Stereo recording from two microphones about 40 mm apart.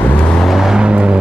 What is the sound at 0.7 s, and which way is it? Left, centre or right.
Vehicle, right.